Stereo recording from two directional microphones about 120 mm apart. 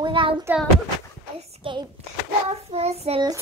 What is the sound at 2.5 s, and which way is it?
Child singing, 60° right (ahead or behind).